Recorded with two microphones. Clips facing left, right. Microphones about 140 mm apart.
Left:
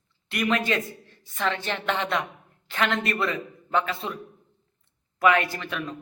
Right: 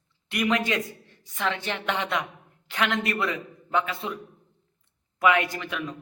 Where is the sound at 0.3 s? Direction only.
15° right (ahead or behind).